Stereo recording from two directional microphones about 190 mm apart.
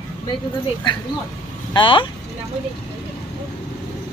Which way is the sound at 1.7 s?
25° left (ahead or behind).